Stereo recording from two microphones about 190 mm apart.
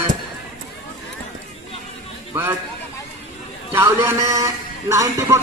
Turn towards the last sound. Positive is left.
turn(degrees=-15)  # may be behind; listen again after turning